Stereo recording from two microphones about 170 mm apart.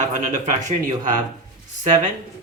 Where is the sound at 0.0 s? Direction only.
45° right (ahead or behind).